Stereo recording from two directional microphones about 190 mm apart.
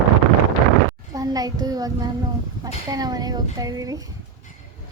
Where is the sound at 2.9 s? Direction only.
20° right (ahead or behind).